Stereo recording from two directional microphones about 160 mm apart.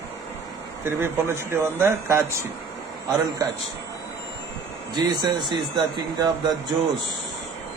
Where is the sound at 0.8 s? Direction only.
15° right (ahead or behind).